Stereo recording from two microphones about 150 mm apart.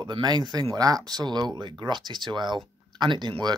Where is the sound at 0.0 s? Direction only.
30° right (ahead or behind).